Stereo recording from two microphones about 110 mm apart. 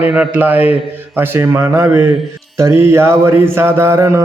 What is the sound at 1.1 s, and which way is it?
Mantra, 20° right (ahead or behind).